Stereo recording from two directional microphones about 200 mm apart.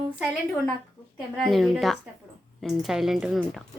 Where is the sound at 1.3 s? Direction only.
Centre (ahead or behind).